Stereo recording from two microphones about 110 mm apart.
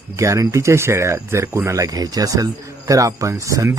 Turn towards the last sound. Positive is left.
turn(degrees=-30)  # may be behind; listen again after turning